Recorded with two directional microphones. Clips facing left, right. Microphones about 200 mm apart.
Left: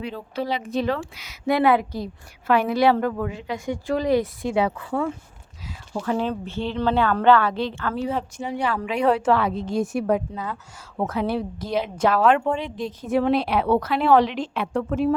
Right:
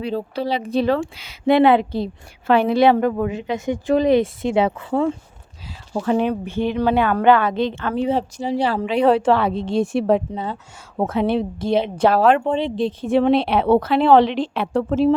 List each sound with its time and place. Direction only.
0.0 s a woman's voice: 35° right (ahead or behind)
6.1 s a woman's voice: 15° right (ahead or behind)
8.4 s a woman's voice: 35° right (ahead or behind)